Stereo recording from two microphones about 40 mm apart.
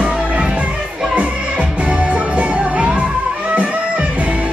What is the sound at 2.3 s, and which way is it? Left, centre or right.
Music, right.